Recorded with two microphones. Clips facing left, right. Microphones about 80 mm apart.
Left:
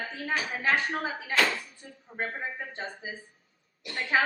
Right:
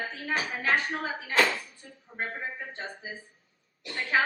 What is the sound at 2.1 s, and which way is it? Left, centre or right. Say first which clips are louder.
Speech: left 1 dB; centre.